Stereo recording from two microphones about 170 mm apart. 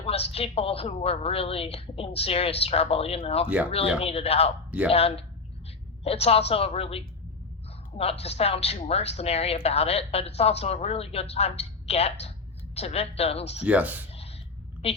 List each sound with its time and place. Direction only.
0.0 s a woman's voice: 35° left (ahead or behind)
13.7 s speech: 10° right (ahead or behind)
14.8 s a woman's voice: 35° left (ahead or behind)